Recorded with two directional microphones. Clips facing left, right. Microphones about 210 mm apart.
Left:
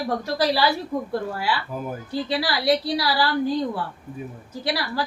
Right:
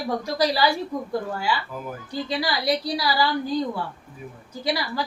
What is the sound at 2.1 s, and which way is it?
A woman's voice, 5° left (ahead or behind).